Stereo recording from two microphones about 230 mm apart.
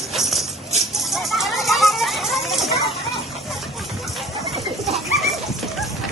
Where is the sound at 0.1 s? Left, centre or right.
Centre.